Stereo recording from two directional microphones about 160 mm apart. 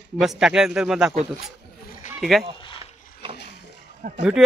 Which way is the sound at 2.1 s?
Centre (ahead or behind).